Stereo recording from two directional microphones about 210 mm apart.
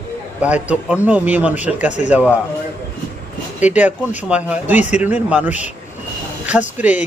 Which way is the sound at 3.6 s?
5° right (ahead or behind).